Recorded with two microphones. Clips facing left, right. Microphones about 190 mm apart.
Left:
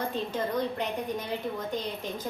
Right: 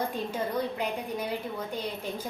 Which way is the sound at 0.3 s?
10° right (ahead or behind).